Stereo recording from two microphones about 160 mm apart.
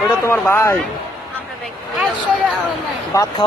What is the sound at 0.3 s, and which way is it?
Speech, 15° left (ahead or behind).